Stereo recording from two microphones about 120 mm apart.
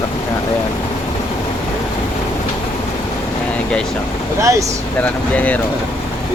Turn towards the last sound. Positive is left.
turn(degrees=10)  # may be behind; listen again after turning